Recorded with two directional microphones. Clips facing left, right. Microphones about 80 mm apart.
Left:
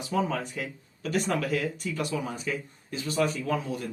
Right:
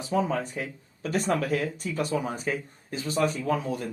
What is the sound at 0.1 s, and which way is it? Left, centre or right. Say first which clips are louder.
Speech: right 2 dB; right.